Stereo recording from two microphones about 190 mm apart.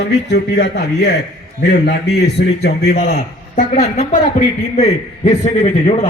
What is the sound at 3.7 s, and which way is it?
A man's voice, 35° left (ahead or behind).